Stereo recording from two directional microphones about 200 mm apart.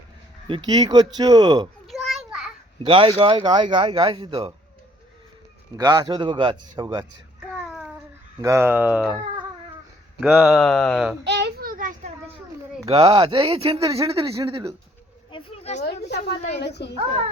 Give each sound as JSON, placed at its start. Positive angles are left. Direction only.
{"t": 0.4, "sound": "speech", "side_deg": -25}
{"t": 1.9, "sound": "a sound", "side_deg": 0}
{"t": 2.8, "sound": "speech", "side_deg": -25}
{"t": 5.7, "sound": "speech", "side_deg": -20}
{"t": 7.4, "sound": "child singing", "side_deg": 0}
{"t": 8.4, "sound": "speech", "side_deg": -15}
{"t": 11.2, "sound": "a sound", "side_deg": -60}
{"t": 12.9, "sound": "speech", "side_deg": -30}
{"t": 15.3, "sound": "a sound", "side_deg": 25}
{"t": 16.0, "sound": "a woman's voice", "side_deg": 55}